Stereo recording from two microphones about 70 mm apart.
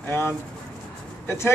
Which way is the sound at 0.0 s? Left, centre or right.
Left.